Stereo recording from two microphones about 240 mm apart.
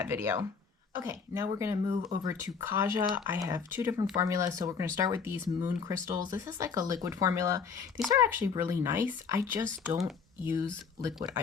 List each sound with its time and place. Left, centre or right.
0.0 s speech: centre